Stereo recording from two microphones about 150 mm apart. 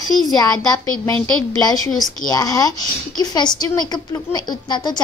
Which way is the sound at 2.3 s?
25° left (ahead or behind).